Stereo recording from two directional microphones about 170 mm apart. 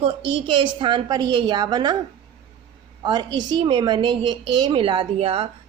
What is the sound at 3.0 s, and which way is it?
A woman's voice, 25° right (ahead or behind).